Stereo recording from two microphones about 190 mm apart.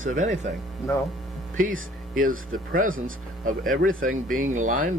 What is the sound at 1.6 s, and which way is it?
Speech, 45° right (ahead or behind).